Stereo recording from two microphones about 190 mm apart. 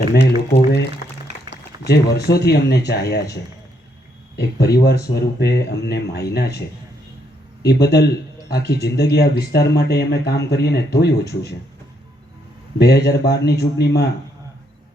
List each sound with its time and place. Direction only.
0.1 s speech: 65° left (ahead or behind)
0.5 s a sound: 65° left (ahead or behind)
1.3 s a sound: 35° right (ahead or behind)
1.8 s speech: 60° left (ahead or behind)
4.4 s speech: 60° left (ahead or behind)
7.7 s speech: 60° left (ahead or behind)
12.8 s speech: 55° left (ahead or behind)